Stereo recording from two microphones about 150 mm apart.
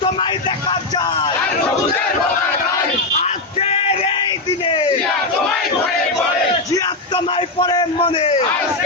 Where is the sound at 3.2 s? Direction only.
40° left (ahead or behind).